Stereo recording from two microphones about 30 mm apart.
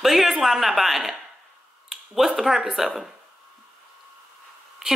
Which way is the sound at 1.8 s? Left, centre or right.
Centre.